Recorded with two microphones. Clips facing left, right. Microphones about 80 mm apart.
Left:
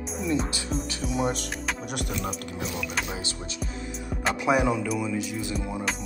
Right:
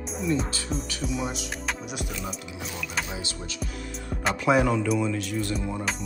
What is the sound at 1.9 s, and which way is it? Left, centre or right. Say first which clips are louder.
Speech: left 3 dB; left.